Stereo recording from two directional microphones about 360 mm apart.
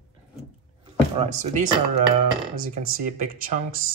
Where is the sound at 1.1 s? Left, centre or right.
Centre.